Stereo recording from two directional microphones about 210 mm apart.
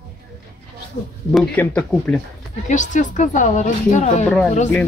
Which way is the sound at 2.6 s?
35° left (ahead or behind).